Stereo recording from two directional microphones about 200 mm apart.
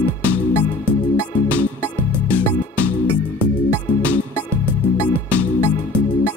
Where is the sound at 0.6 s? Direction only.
15° left (ahead or behind).